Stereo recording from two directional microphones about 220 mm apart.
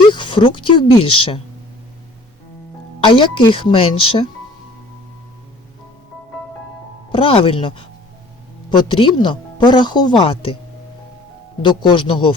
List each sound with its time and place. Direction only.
0.1 s speech: 20° left (ahead or behind)
3.0 s speech: 20° left (ahead or behind)
7.1 s speech: 25° left (ahead or behind)
11.6 s speech: 20° left (ahead or behind)